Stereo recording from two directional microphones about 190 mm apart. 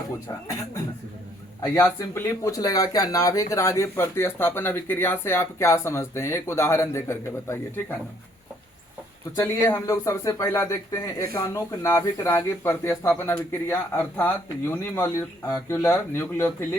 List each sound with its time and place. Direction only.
1.6 s speech: 15° left (ahead or behind)
9.3 s speech: 15° left (ahead or behind)